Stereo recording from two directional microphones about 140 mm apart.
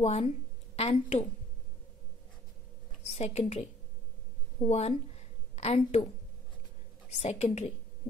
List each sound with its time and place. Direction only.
0.0 s a woman's voice: 45° left (ahead or behind)
3.1 s a woman's voice: 50° left (ahead or behind)
4.6 s a woman's voice: 50° left (ahead or behind)
7.2 s a woman's voice: 50° left (ahead or behind)